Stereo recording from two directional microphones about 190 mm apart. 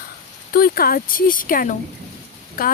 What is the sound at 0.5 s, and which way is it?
Speech, 50° left (ahead or behind).